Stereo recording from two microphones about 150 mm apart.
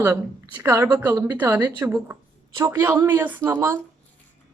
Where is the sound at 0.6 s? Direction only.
20° right (ahead or behind).